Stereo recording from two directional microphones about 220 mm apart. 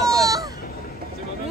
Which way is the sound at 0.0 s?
15° right (ahead or behind).